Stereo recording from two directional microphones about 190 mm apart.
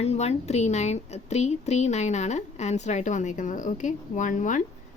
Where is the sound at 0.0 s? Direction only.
35° left (ahead or behind).